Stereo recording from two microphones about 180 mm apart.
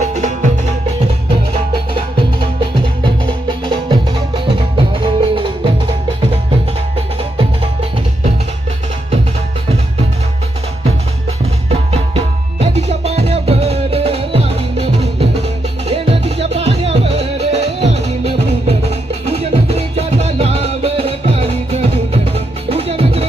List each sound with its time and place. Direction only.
0.0 s music: 40° right (ahead or behind)
2.6 s music: 25° right (ahead or behind)
5.0 s music: 30° right (ahead or behind)
11.7 s music: 30° right (ahead or behind)